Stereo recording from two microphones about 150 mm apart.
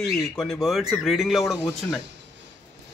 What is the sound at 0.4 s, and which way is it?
Speech, centre (ahead or behind).